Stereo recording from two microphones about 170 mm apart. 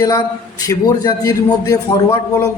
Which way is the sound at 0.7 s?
20° left (ahead or behind).